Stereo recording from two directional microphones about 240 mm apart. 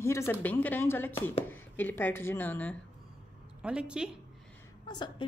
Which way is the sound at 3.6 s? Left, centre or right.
Centre.